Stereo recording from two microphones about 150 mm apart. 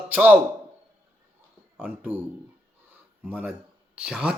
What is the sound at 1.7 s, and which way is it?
Speech, 10° right (ahead or behind).